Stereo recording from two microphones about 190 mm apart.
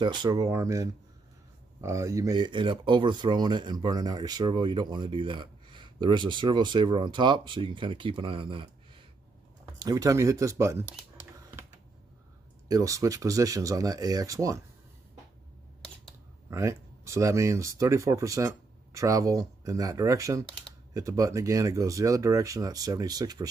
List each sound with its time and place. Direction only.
0.0 s speech: 20° right (ahead or behind)
12.6 s speech: 20° right (ahead or behind)
16.4 s speech: 15° right (ahead or behind)